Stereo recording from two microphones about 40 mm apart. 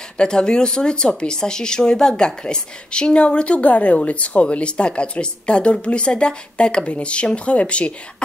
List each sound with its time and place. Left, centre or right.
0.2 s speech: left